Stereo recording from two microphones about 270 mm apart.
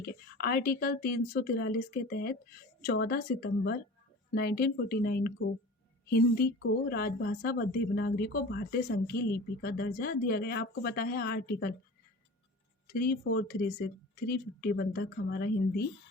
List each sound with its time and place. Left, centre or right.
0.0 s speech: left
12.9 s speech: left